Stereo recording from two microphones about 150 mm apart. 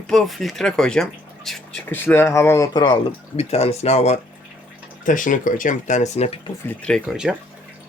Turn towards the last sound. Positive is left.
turn(degrees=-5)  # may be behind; listen again after turning